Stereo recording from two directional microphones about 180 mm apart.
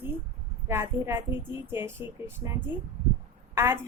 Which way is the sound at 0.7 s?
15° right (ahead or behind).